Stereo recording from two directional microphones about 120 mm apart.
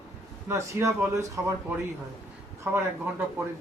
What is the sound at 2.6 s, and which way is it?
Speech, 20° right (ahead or behind).